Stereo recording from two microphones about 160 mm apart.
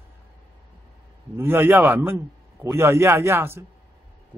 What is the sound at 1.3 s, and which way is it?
Speech, 15° right (ahead or behind).